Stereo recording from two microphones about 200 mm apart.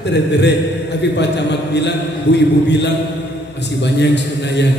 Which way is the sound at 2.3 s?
60° left (ahead or behind).